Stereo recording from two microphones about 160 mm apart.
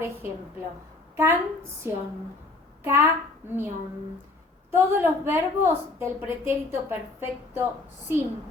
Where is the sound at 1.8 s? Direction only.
15° right (ahead or behind).